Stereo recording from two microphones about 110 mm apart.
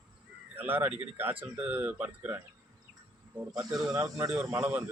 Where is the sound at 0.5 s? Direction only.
20° right (ahead or behind).